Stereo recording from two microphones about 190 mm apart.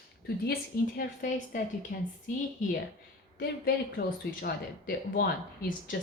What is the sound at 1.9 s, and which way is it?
Speech, 55° left (ahead or behind).